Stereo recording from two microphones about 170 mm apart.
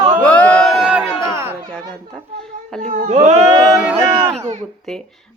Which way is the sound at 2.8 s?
45° right (ahead or behind).